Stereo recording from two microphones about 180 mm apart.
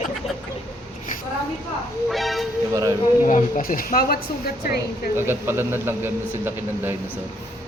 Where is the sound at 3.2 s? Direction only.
45° left (ahead or behind).